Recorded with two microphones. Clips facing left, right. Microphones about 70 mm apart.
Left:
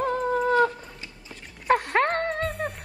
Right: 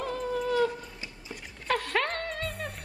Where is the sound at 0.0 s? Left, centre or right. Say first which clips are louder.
Left 7 dB; left.